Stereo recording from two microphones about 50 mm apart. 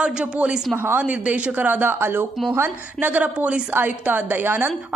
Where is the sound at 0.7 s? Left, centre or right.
Right.